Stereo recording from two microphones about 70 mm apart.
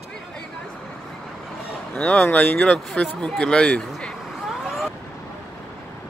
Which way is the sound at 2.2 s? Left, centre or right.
Left.